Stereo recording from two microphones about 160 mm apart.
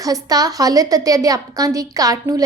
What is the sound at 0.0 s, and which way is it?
A woman's voice, 25° right (ahead or behind).